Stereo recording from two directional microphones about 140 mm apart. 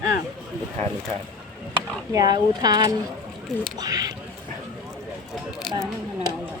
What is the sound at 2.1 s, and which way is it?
Speech, 30° right (ahead or behind).